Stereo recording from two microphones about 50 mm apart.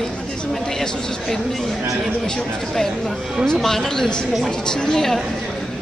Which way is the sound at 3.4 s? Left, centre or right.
Centre.